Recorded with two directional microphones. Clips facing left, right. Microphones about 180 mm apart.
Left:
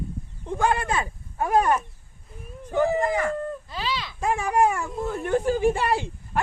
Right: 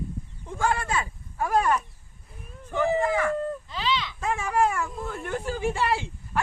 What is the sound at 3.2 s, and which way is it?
Speech, 40° left (ahead or behind).